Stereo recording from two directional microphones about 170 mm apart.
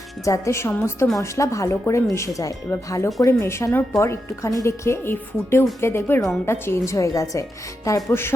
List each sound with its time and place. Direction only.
0.3 s a woman's voice: 15° left (ahead or behind)